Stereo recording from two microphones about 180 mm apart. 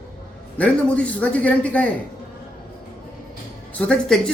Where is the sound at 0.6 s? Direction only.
10° left (ahead or behind).